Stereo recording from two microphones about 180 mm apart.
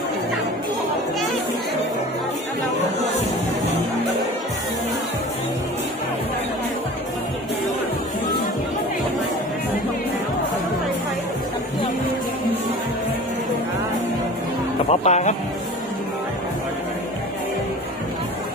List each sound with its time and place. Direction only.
14.9 s speech: 40° left (ahead or behind)